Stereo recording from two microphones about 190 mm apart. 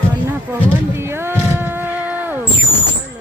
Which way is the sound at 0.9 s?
10° right (ahead or behind).